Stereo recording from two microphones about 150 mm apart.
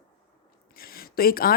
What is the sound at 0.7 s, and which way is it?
Speech, 80° left.